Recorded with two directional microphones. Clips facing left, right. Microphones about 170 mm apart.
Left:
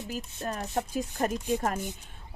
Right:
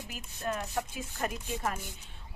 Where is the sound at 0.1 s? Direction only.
35° left (ahead or behind).